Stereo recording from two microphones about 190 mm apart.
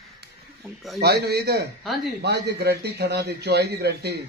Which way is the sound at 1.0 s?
60° right (ahead or behind).